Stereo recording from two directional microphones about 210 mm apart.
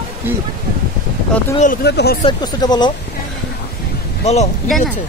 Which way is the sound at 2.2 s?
20° left (ahead or behind).